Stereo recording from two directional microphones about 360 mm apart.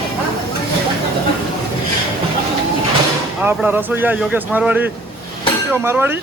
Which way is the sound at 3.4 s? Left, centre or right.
Centre.